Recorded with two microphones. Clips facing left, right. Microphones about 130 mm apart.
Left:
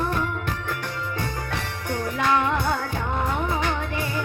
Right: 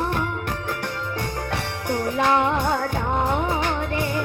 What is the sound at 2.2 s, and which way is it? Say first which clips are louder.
Music: right 1 dB; 20° right (ahead or behind).